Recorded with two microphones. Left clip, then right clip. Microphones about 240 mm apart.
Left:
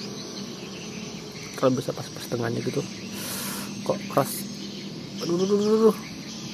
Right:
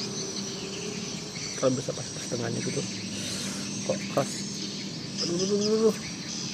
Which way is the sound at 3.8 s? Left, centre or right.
Centre.